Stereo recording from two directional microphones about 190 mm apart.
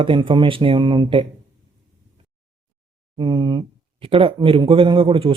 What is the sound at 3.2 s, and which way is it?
Speech, 25° right (ahead or behind).